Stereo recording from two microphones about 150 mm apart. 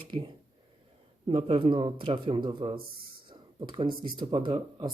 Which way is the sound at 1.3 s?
40° right (ahead or behind).